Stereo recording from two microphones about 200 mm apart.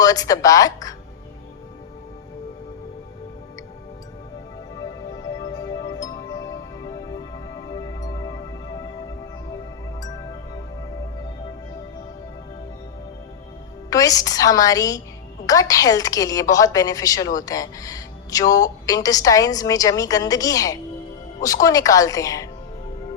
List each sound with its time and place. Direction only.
0.0 s a woman's voice: 20° left (ahead or behind)
5.2 s music: 20° left (ahead or behind)
8.0 s music: 20° left (ahead or behind)
13.9 s a woman's voice: 15° left (ahead or behind)